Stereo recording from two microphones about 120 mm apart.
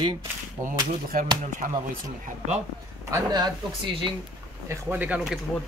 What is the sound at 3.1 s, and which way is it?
Speech, 35° right (ahead or behind).